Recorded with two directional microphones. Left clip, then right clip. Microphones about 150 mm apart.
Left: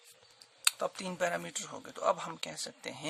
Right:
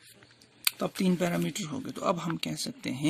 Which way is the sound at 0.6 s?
20° right (ahead or behind).